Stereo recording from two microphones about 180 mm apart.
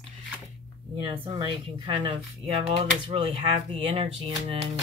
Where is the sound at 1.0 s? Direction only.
30° right (ahead or behind).